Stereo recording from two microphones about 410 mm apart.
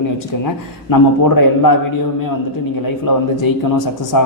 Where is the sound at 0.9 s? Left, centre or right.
Left.